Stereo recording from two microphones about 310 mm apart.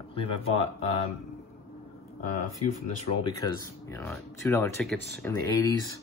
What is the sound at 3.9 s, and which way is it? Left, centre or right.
Speech, centre.